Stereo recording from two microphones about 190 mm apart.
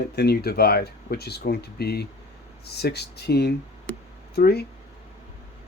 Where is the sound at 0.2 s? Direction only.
55° left (ahead or behind).